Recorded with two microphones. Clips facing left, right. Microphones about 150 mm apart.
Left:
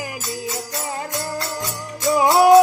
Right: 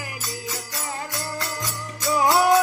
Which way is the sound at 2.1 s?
20° left (ahead or behind).